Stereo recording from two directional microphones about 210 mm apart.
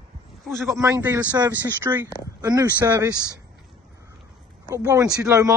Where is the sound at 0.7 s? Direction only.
15° right (ahead or behind).